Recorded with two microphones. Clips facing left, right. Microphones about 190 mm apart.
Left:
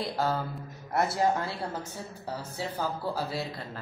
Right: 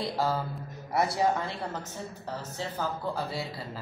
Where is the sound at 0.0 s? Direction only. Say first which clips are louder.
Even; centre (ahead or behind).